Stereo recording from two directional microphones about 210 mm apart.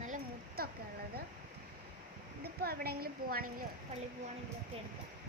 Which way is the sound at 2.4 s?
45° right (ahead or behind).